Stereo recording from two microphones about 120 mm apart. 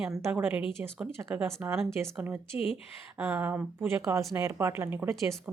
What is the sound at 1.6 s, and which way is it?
A woman's voice, 15° right (ahead or behind).